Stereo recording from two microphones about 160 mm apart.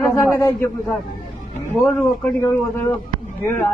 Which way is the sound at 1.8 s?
15° left (ahead or behind).